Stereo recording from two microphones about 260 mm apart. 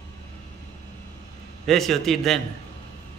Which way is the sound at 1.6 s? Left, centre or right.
Centre.